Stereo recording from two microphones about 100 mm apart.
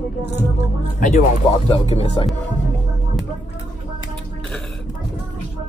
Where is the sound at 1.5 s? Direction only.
85° left.